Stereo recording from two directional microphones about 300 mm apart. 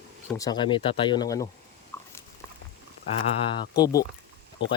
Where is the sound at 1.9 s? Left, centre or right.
Centre.